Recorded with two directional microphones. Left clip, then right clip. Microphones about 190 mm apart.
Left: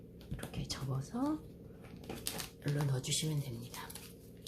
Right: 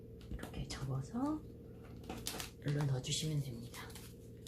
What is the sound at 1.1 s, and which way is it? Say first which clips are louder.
Speech: left 2 dB; 30° left (ahead or behind).